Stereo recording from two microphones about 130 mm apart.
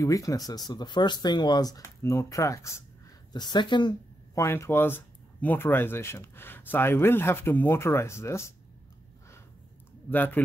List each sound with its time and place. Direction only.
0.0 s speech: 25° left (ahead or behind)
3.3 s speech: 35° left (ahead or behind)
4.4 s speech: 20° left (ahead or behind)
10.1 s speech: 15° left (ahead or behind)